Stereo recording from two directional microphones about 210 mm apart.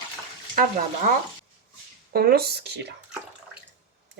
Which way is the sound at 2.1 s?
50° right (ahead or behind).